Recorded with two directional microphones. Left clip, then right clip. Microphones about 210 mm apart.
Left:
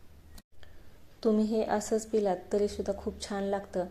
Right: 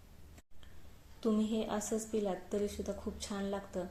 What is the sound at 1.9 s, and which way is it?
A woman's voice, 10° left (ahead or behind).